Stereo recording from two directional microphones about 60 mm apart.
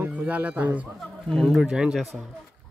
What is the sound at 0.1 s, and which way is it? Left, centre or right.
Speech, right.